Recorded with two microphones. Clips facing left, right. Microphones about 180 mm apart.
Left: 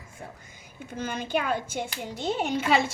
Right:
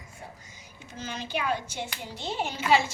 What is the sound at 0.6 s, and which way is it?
A child's voice, 55° left (ahead or behind).